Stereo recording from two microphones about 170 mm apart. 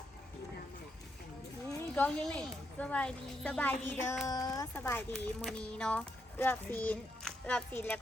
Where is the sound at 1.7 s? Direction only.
10° left (ahead or behind).